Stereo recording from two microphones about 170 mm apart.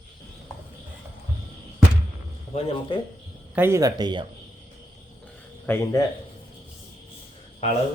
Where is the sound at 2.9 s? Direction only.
30° left (ahead or behind).